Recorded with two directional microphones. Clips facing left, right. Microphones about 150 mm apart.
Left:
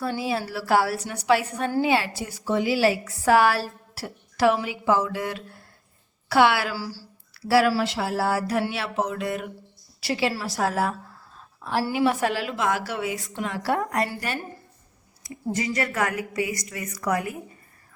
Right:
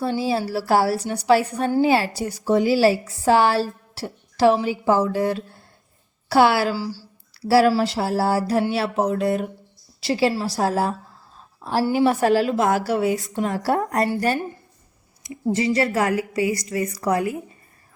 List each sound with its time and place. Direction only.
0.0 s a woman's voice: 30° right (ahead or behind)
6.7 s a woman's voice: 20° right (ahead or behind)
7.4 s a woman's voice: 30° right (ahead or behind)
15.2 s a woman's voice: 25° right (ahead or behind)